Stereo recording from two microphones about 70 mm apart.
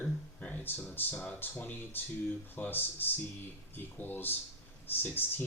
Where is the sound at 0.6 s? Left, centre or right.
Left.